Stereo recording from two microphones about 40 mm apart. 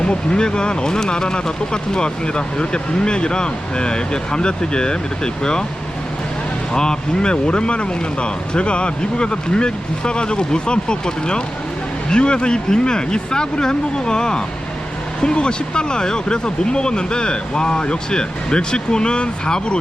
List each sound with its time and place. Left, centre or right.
0.0 s speech: left
6.7 s speech: centre